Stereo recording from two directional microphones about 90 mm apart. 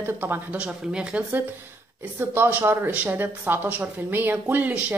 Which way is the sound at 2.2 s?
25° right (ahead or behind).